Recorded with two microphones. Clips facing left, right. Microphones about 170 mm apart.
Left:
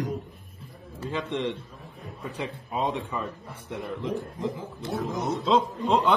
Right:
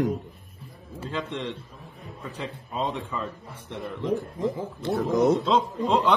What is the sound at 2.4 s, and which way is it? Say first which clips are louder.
A man's voice: left 1 dB; 10° left (ahead or behind).